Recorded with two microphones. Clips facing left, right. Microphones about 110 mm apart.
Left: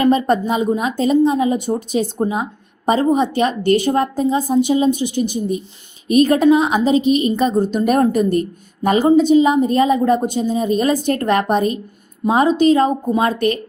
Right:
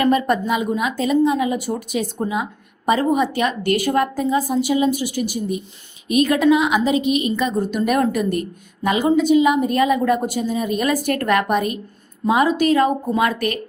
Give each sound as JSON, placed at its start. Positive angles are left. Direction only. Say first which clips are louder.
{"t": 0.0, "sound": "a woman's voice", "louder": "left 3 dB", "side_deg": 30}